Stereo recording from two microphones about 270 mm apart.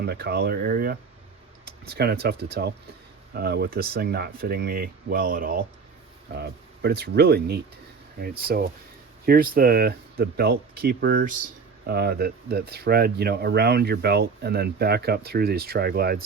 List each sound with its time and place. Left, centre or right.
0.0 s speech: right